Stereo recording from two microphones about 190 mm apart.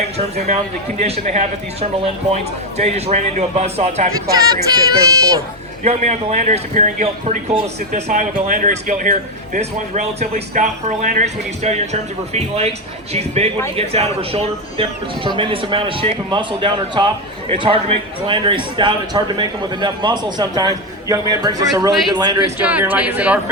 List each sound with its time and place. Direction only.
0.2 s speech: 35° right (ahead or behind)
4.3 s a man's voice: 20° right (ahead or behind)
5.8 s a man's voice: 35° right (ahead or behind); by 23.4 s 5° right (ahead or behind)